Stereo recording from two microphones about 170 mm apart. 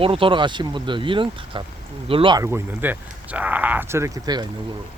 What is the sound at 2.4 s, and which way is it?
Speech, 10° right (ahead or behind).